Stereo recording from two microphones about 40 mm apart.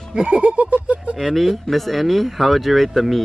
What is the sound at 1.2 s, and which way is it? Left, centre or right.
Speech, centre.